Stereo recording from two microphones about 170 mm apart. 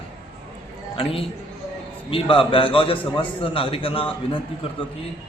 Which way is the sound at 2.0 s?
35° left (ahead or behind).